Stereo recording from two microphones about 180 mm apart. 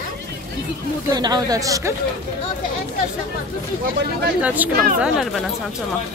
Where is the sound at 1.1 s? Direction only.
20° right (ahead or behind).